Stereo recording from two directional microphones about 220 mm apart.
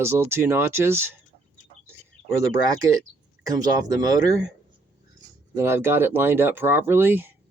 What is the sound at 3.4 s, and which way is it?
Speech, 15° right (ahead or behind).